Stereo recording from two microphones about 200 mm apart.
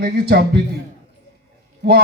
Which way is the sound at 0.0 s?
50° right (ahead or behind).